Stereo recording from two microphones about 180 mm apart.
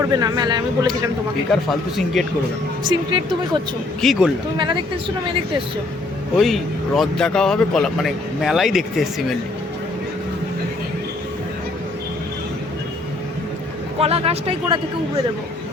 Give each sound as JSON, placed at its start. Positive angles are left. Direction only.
{"t": 0.0, "sound": "speech", "side_deg": -20}
{"t": 2.2, "sound": "speech", "side_deg": 0}
{"t": 2.9, "sound": "speech", "side_deg": -25}
{"t": 4.0, "sound": "speech", "side_deg": 0}
{"t": 4.5, "sound": "speech", "side_deg": -25}
{"t": 6.4, "sound": "speech", "side_deg": 0}
{"t": 14.0, "sound": "speech", "side_deg": -35}